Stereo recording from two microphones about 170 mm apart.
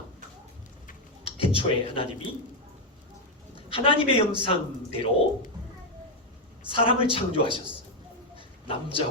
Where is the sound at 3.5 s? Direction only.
30° left (ahead or behind).